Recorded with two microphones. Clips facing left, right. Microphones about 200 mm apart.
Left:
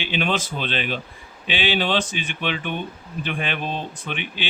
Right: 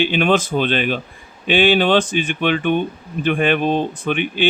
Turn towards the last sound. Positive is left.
turn(degrees=-50)  # may be behind; listen again after turning